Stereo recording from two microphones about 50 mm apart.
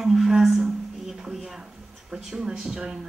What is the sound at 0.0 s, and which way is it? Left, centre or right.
Music, centre.